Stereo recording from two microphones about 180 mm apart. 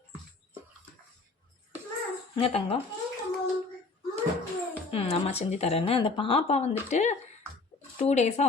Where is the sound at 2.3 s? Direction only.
30° left (ahead or behind).